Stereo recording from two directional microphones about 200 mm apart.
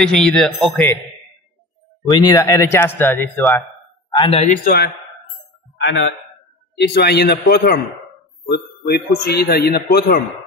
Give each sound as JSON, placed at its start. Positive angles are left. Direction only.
{"t": 0.0, "sound": "a man's voice", "side_deg": 5}
{"t": 2.0, "sound": "speech", "side_deg": 20}
{"t": 4.1, "sound": "a man's voice", "side_deg": 25}
{"t": 4.5, "sound": "a man's voice", "side_deg": 50}
{"t": 5.9, "sound": "a man's voice", "side_deg": 60}
{"t": 8.8, "sound": "a man's voice", "side_deg": 50}